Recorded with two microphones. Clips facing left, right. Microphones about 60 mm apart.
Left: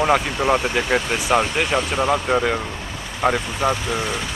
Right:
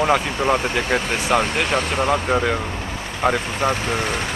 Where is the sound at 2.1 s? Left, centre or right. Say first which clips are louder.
Even; centre.